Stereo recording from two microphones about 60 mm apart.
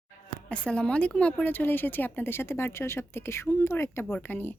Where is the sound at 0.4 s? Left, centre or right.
Centre; by 4.5 s left.